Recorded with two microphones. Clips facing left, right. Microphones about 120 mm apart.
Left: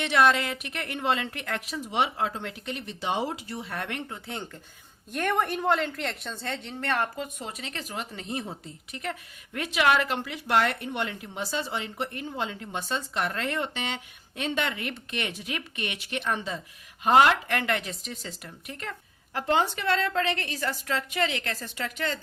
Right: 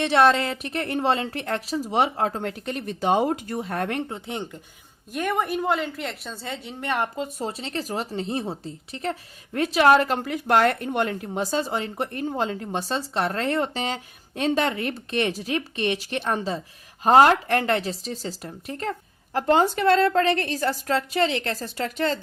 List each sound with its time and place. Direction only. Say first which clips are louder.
0.0 s speech: right 4 dB; 35° right (ahead or behind)
4.3 s speech: right 5 dB; 15° right (ahead or behind)
5.1 s a woman's voice: right 2 dB; 5° right (ahead or behind)
7.2 s speech: right 6 dB; 35° right (ahead or behind)